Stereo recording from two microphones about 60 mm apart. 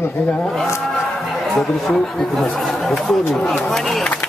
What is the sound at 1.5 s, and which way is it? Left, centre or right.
Speech, centre.